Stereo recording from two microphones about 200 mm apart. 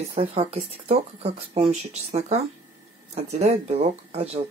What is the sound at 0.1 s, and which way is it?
Speech, 30° right (ahead or behind).